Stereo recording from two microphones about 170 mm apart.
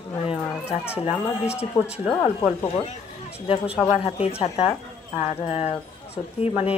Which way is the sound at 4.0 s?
35° left (ahead or behind).